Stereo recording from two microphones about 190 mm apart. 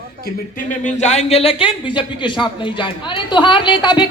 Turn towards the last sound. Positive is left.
turn(degrees=25)  # may be behind; listen again after turning